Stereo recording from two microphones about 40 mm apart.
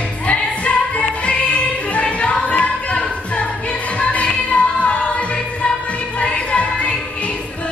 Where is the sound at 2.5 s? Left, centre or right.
Left.